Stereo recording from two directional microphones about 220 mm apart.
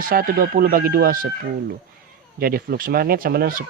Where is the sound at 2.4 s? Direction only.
40° right (ahead or behind).